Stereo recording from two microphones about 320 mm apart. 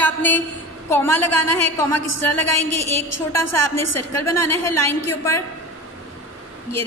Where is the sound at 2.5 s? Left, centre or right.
Left.